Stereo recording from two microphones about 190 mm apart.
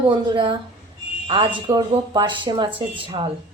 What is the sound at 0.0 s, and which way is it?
Speech, 25° right (ahead or behind).